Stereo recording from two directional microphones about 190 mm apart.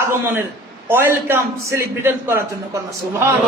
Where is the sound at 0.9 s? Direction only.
10° right (ahead or behind).